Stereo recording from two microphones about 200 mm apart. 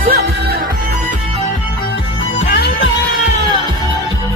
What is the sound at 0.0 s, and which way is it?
Music, 45° right (ahead or behind).